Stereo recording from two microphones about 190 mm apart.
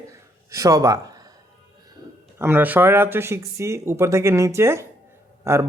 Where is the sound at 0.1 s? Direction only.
15° right (ahead or behind).